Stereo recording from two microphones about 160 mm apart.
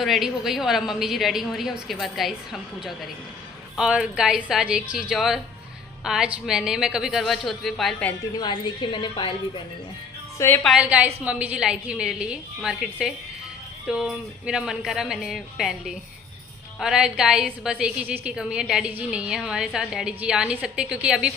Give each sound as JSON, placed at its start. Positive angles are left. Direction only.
{"t": 0.0, "sound": "a woman's voice", "side_deg": 0}
{"t": 8.4, "sound": "a woman's voice", "side_deg": 30}
{"t": 10.3, "sound": "a woman's voice", "side_deg": 15}
{"t": 10.6, "sound": "a woman's voice", "side_deg": -5}